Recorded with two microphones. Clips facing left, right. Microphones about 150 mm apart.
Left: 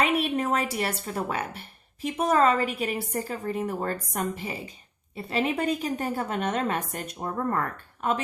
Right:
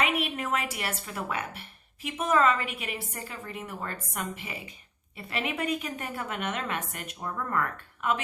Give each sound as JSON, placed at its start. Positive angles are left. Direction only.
{"t": 0.0, "sound": "a woman's voice", "side_deg": 35}